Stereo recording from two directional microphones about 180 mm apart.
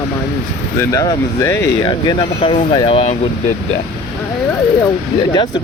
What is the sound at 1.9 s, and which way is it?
Speech, 25° left (ahead or behind).